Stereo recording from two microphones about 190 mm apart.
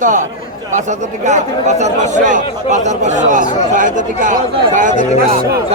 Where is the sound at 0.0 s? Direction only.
45° right (ahead or behind).